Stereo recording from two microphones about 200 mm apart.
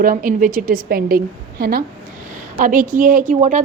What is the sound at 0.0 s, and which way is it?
A woman's voice, 45° right (ahead or behind).